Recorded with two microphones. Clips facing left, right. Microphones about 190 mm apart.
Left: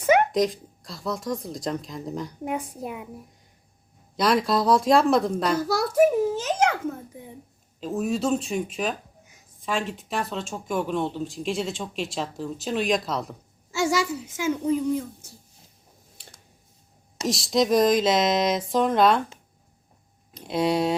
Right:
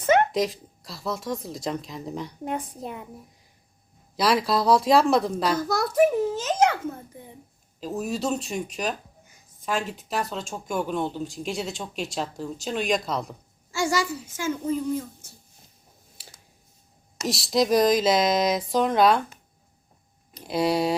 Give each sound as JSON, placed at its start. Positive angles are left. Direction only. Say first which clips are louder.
{"t": 0.0, "sound": "a sound", "louder": "left 1 dB", "side_deg": 10}
{"t": 0.3, "sound": "speech", "louder": "left 2 dB", "side_deg": 0}
{"t": 2.4, "sound": "a child's voice", "louder": "left 1 dB", "side_deg": 10}
{"t": 4.2, "sound": "a child's voice", "louder": "left 1 dB", "side_deg": 0}
{"t": 7.8, "sound": "speech", "louder": "left 3 dB", "side_deg": 0}
{"t": 14.3, "sound": "a child's voice", "louder": "left 3 dB", "side_deg": 15}
{"t": 16.1, "sound": "a sound", "louder": "even", "side_deg": -5}
{"t": 17.2, "sound": "speech", "louder": "left 1 dB", "side_deg": 0}
{"t": 20.3, "sound": "speech", "louder": "even", "side_deg": 0}